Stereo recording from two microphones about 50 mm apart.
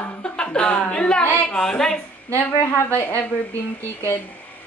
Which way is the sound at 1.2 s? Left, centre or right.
Left.